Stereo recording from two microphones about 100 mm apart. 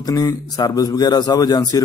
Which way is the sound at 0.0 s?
40° left (ahead or behind).